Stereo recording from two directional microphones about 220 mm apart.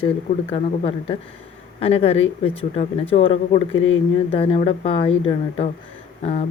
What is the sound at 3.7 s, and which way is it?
Speech, 60° left (ahead or behind).